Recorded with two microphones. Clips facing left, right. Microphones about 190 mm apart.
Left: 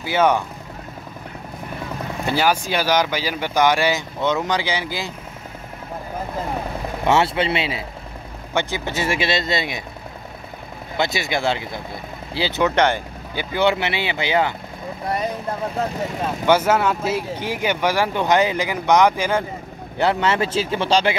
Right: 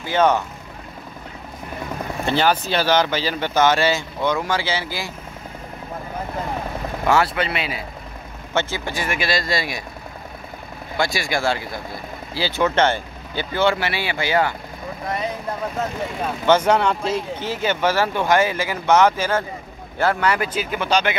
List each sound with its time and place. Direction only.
0.0 s speech: 10° left (ahead or behind)
2.2 s speech: 10° left (ahead or behind)
7.1 s speech: 25° left (ahead or behind)
8.5 s speech: 15° left (ahead or behind)
11.0 s speech: 20° left (ahead or behind)
16.4 s speech: 5° left (ahead or behind); by 21.2 s 30° left (ahead or behind)